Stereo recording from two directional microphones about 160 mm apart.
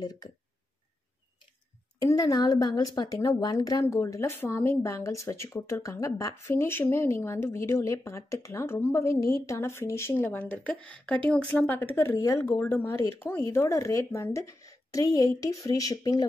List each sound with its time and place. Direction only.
0.0 s a woman's voice: 25° left (ahead or behind)
2.0 s a woman's voice: 25° left (ahead or behind)